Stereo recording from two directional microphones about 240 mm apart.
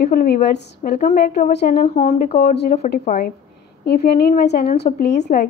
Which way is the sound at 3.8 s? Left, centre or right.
Left.